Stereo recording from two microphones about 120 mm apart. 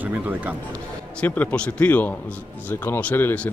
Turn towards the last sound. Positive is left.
turn(degrees=15)  # may be behind; listen again after turning